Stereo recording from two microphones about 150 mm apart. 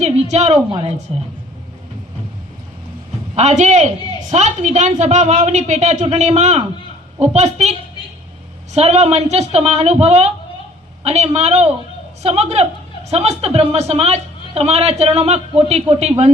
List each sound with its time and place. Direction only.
0.0 s a sound: 45° right (ahead or behind)
0.7 s speech: 30° right (ahead or behind)
3.3 s a woman's voice: 50° right (ahead or behind)